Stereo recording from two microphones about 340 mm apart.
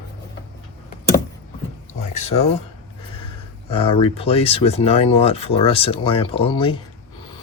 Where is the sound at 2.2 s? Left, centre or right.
Centre.